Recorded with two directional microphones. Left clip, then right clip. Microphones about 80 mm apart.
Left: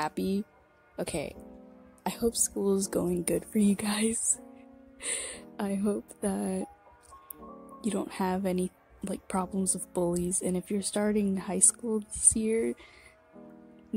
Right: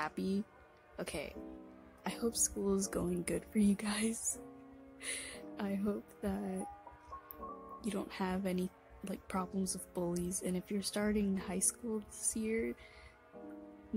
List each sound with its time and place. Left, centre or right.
0.0 s a woman's voice: left
7.8 s a woman's voice: left
9.9 s a woman's voice: left